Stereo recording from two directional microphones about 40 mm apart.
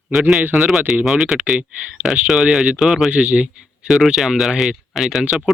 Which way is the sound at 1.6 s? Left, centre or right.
Right.